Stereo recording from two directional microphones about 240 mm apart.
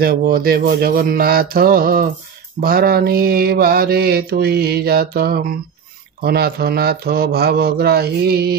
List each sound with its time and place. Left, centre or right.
0.0 s mantra: right